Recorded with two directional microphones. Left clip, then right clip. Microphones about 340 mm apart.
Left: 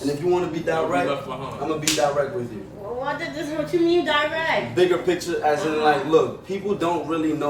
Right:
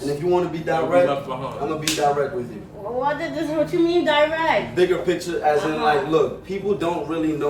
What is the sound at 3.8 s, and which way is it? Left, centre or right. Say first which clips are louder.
Speech: right 2 dB; centre.